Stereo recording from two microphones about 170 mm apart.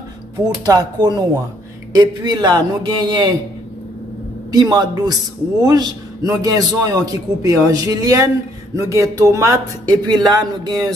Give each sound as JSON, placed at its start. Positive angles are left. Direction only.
{"t": 0.7, "sound": "a man's voice", "side_deg": -25}
{"t": 4.5, "sound": "a man's voice", "side_deg": -25}